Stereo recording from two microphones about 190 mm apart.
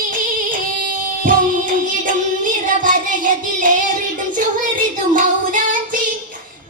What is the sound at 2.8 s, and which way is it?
Music, 45° right (ahead or behind).